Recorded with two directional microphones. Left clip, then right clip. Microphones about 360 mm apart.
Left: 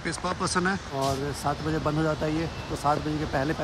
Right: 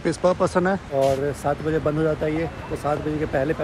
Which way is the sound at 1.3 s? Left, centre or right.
Centre.